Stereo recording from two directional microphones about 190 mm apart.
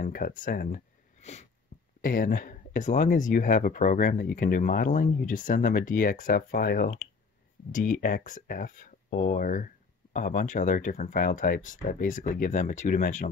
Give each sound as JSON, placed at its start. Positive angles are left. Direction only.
{"t": 0.0, "sound": "speech", "side_deg": 45}
{"t": 2.0, "sound": "speech", "side_deg": 50}